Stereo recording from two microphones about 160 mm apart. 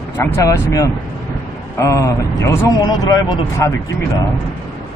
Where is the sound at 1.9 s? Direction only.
20° left (ahead or behind).